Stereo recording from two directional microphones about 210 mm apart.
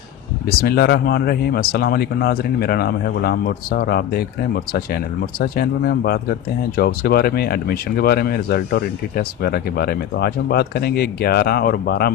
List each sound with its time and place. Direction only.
0.4 s speech: 45° left (ahead or behind)